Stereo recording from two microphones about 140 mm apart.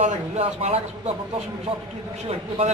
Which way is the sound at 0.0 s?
50° right (ahead or behind).